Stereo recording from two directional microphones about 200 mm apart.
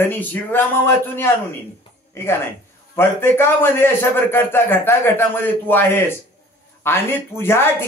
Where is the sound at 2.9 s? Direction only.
10° left (ahead or behind).